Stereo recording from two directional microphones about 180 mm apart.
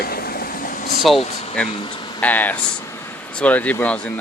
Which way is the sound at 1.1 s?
35° left (ahead or behind).